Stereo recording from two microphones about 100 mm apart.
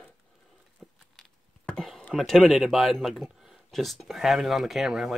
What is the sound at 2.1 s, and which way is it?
Speech, centre (ahead or behind).